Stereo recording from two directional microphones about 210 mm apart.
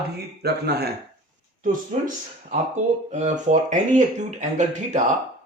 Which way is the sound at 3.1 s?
35° right (ahead or behind).